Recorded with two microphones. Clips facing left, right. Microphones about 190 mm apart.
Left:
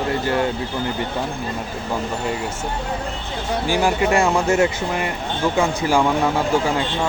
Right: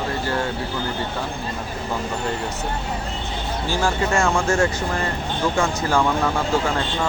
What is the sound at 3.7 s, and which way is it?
Speech, 15° left (ahead or behind).